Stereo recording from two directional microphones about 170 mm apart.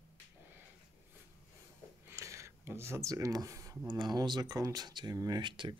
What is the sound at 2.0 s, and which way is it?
Speech, 15° right (ahead or behind).